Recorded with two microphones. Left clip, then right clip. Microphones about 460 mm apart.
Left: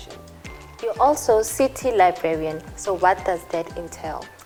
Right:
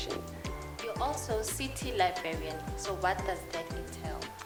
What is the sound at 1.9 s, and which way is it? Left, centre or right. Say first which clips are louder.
Speech: left 11 dB; left.